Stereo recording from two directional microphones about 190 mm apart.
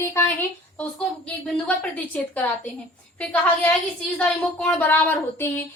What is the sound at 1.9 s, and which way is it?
Speech, 10° left (ahead or behind).